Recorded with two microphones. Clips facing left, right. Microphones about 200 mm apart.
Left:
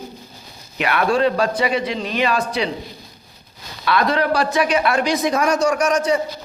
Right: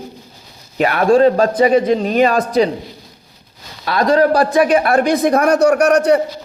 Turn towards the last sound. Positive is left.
turn(degrees=-65)  # may be behind; listen again after turning